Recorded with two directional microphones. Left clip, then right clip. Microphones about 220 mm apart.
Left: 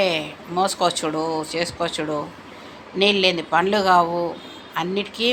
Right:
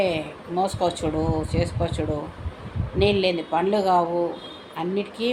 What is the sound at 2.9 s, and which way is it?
Speech, 5° right (ahead or behind).